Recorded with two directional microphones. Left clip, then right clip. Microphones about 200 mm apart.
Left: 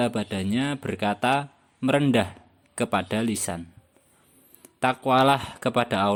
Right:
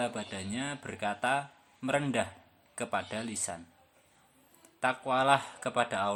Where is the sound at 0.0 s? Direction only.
45° left (ahead or behind).